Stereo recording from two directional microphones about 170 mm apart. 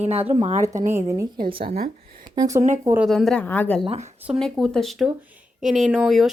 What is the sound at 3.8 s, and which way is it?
Speech, 40° right (ahead or behind).